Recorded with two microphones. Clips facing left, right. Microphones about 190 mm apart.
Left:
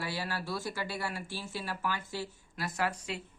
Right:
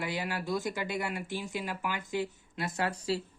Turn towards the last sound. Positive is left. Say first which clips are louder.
# right 3 dB
turn(degrees=-35)  # may be behind; listen again after turning